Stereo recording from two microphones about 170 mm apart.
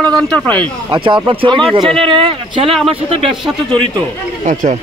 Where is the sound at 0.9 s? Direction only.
30° right (ahead or behind).